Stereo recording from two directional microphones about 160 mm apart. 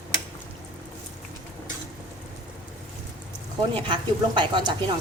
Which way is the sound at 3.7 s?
30° right (ahead or behind).